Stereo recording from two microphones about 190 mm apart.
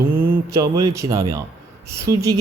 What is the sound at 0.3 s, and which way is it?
Speech, 15° right (ahead or behind).